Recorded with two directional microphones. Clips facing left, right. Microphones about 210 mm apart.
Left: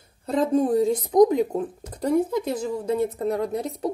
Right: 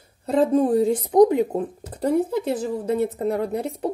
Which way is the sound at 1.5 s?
35° right (ahead or behind).